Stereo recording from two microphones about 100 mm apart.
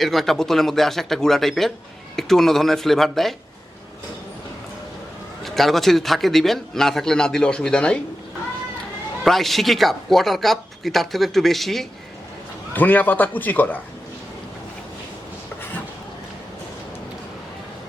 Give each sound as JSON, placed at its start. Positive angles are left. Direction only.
{"t": 0.0, "sound": "speech", "side_deg": 0}
{"t": 5.4, "sound": "speech", "side_deg": 0}
{"t": 9.2, "sound": "speech", "side_deg": 0}
{"t": 12.7, "sound": "a man's voice", "side_deg": 15}